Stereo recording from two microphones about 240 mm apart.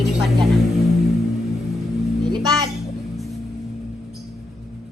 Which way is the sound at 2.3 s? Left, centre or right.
Centre.